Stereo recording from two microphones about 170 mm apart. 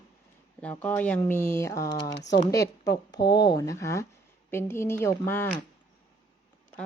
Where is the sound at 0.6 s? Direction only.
10° left (ahead or behind).